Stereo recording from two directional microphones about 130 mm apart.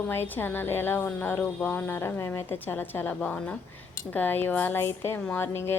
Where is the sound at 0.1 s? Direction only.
15° left (ahead or behind).